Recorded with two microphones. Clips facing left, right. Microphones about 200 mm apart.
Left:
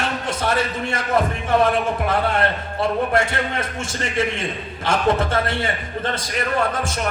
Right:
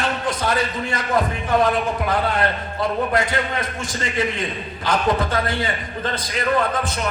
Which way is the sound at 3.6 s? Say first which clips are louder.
Even; 25° left (ahead or behind).